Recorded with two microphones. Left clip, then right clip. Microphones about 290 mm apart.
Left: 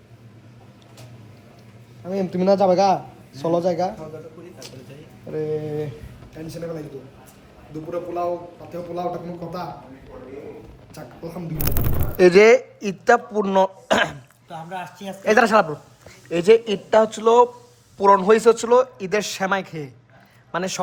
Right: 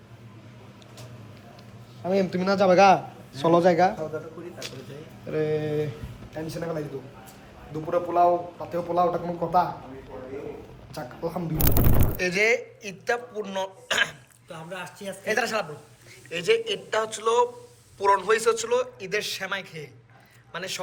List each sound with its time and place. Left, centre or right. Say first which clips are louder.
2.0 s a man's voice: left 4 dB; centre
5.3 s speech: even; centre
7.9 s speech: right 4 dB; centre
10.9 s speech: right 4 dB; centre
12.1 s speech: left 12 dB; left